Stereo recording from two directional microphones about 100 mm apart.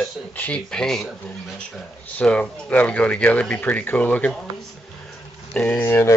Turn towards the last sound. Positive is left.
turn(degrees=30)  # may be behind; listen again after turning